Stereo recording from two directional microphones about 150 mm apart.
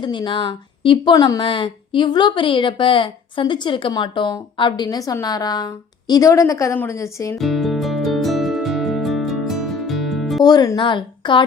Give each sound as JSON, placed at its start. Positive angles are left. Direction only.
{"t": 0.0, "sound": "a woman's voice", "side_deg": 30}
{"t": 7.3, "sound": "music", "side_deg": 0}
{"t": 10.4, "sound": "speech", "side_deg": 25}